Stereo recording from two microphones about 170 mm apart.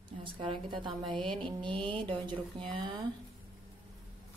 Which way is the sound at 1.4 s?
30° right (ahead or behind).